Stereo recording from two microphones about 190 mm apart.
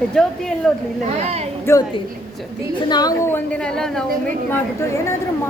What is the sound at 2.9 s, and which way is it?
Speech, 20° left (ahead or behind).